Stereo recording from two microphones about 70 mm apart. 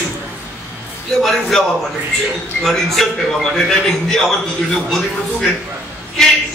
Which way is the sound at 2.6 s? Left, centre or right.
Centre.